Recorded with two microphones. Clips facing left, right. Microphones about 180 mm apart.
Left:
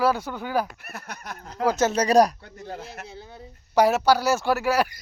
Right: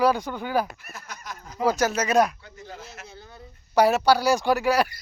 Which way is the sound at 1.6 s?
25° left (ahead or behind).